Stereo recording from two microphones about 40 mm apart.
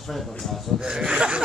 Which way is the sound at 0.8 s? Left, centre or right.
Centre.